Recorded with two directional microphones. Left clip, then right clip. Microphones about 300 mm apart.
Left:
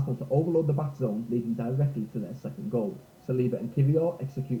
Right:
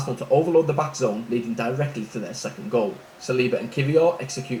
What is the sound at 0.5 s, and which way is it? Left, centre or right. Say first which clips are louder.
Speech: right 8 dB; centre.